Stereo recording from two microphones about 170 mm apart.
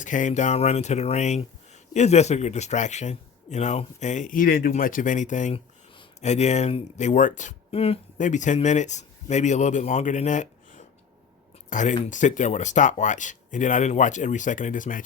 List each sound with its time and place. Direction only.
0.0 s speech: 50° left (ahead or behind)